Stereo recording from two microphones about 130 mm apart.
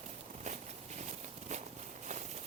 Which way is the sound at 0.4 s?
65° right (ahead or behind).